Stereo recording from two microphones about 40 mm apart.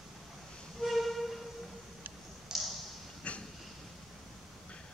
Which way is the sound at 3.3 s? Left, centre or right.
Left.